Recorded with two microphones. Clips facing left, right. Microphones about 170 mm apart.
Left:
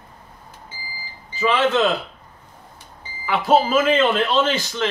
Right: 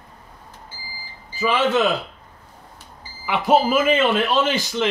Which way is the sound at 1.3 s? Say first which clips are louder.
Left 1 dB; 10° right (ahead or behind).